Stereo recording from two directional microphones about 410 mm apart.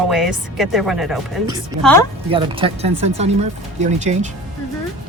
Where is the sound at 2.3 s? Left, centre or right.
Centre.